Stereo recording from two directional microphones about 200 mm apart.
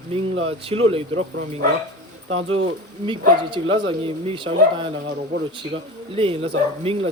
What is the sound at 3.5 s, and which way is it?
Speech, 25° right (ahead or behind).